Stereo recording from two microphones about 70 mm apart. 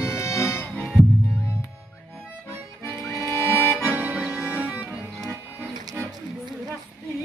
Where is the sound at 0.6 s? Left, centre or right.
Left.